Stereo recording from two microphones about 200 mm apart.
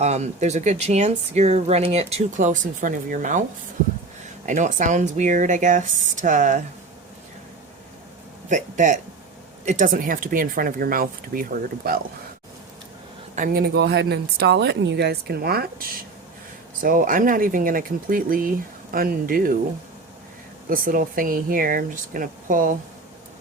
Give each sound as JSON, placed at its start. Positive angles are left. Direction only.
{"t": 0.0, "sound": "speech", "side_deg": -35}
{"t": 4.4, "sound": "speech", "side_deg": -35}
{"t": 8.4, "sound": "speech", "side_deg": -40}
{"t": 13.3, "sound": "speech", "side_deg": -45}
{"t": 20.7, "sound": "speech", "side_deg": -45}